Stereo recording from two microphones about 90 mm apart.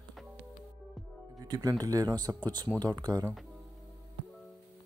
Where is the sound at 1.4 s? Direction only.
50° right (ahead or behind).